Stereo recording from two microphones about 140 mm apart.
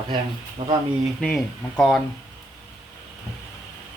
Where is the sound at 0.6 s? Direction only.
35° right (ahead or behind).